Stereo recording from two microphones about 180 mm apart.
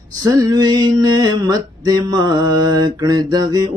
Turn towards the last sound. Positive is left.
turn(degrees=-20)  # may be behind; listen again after turning